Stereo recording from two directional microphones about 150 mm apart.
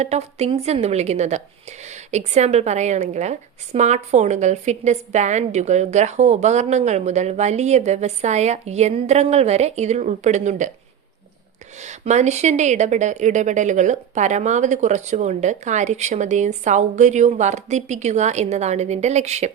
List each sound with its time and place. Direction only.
0.0 s a woman's voice: 45° right (ahead or behind)
11.8 s a woman's voice: 50° right (ahead or behind)